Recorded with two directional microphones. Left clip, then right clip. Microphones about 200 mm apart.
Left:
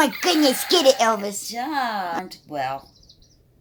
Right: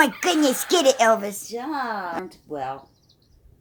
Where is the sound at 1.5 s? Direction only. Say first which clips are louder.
Left 4 dB; 40° left (ahead or behind).